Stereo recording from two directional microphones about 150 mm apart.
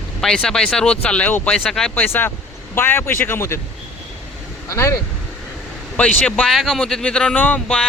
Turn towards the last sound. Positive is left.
turn(degrees=10)  # may be behind; listen again after turning